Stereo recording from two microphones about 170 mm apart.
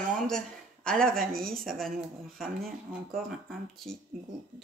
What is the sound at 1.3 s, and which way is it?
Speech, 60° right (ahead or behind).